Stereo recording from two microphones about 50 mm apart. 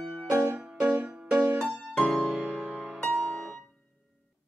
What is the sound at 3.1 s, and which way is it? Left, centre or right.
Music, centre.